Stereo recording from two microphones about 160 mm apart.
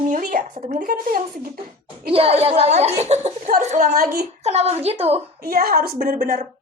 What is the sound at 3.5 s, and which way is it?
Speech, 55° right (ahead or behind).